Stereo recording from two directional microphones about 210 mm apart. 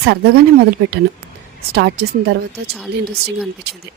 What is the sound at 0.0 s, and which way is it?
Speech, 50° right (ahead or behind).